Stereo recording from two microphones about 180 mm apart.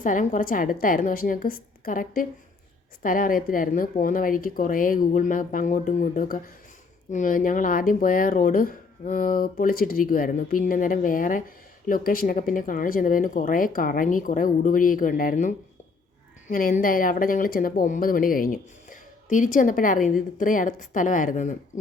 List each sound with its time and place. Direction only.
0.0 s speech: 45° left (ahead or behind)